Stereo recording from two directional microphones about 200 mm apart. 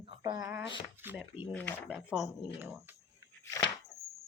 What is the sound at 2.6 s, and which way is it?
Speech, 10° right (ahead or behind).